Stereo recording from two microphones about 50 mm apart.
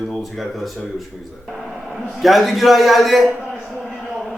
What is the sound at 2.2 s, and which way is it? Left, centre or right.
Speech, centre.